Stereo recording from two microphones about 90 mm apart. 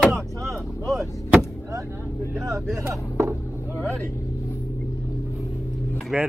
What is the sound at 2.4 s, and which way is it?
Speech, 30° right (ahead or behind).